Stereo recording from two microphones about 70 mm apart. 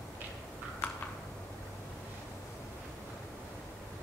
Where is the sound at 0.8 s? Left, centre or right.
Centre.